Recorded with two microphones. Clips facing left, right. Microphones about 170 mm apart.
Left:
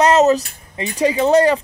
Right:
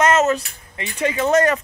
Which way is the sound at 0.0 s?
35° left (ahead or behind).